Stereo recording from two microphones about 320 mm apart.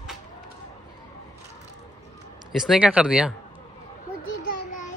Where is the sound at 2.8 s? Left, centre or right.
Centre.